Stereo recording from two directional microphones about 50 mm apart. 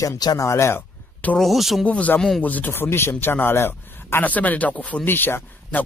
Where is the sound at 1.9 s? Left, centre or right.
Left.